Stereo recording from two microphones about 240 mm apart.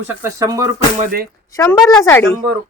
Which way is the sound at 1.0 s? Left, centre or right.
Right.